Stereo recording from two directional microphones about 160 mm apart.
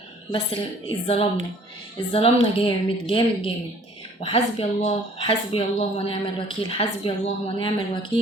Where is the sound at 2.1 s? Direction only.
35° left (ahead or behind).